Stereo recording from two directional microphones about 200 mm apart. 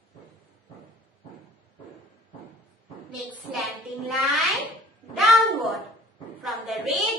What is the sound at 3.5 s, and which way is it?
Speech, centre (ahead or behind).